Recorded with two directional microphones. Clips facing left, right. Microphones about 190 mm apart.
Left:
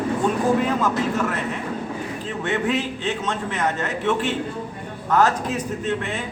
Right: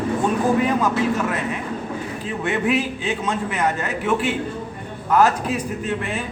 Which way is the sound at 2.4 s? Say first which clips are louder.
Right 2 dB; 10° right (ahead or behind).